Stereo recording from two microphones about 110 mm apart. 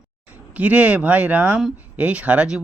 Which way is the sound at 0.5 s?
15° right (ahead or behind).